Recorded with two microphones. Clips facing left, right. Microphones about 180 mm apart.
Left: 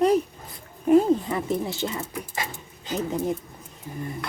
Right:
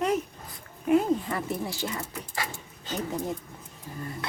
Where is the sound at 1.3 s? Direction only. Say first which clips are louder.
Left 5 dB; 20° left (ahead or behind).